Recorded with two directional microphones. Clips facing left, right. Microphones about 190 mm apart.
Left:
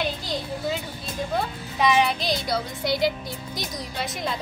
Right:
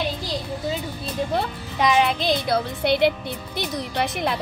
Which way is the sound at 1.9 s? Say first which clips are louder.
Right 2 dB; 55° right (ahead or behind).